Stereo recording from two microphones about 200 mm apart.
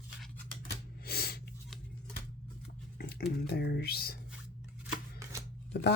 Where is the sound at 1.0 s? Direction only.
50° left (ahead or behind).